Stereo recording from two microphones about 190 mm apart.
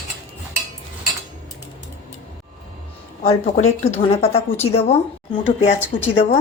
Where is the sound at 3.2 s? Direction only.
35° left (ahead or behind).